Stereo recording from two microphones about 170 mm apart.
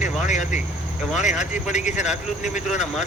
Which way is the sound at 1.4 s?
45° left (ahead or behind).